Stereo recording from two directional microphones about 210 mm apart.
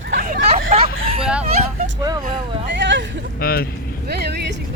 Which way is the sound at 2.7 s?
60° right (ahead or behind).